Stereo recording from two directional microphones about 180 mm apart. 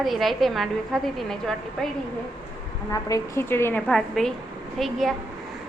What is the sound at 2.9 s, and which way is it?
A woman's voice, 20° left (ahead or behind).